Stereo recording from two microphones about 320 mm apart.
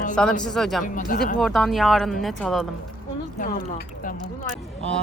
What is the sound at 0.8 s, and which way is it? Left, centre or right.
Speech, left.